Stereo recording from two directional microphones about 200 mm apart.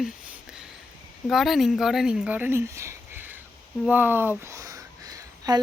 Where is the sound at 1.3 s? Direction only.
Centre (ahead or behind).